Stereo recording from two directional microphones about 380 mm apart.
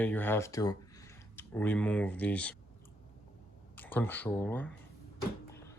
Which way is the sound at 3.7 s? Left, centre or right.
Centre.